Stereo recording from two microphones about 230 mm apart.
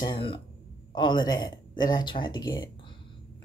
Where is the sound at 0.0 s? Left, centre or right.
Left.